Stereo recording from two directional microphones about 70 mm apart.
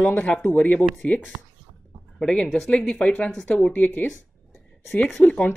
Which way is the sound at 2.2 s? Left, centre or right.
Centre.